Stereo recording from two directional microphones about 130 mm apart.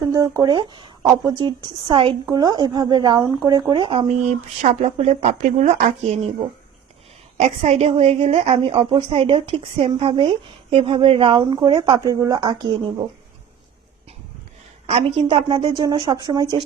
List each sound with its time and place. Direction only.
0.0 s a woman's voice: 25° right (ahead or behind); by 4.0 s 40° right (ahead or behind)
4.1 s speech: 60° right (ahead or behind)
7.3 s a woman's voice: 55° right (ahead or behind); by 13.1 s 40° right (ahead or behind)
14.8 s a woman's voice: 45° right (ahead or behind); by 16.6 s 30° right (ahead or behind)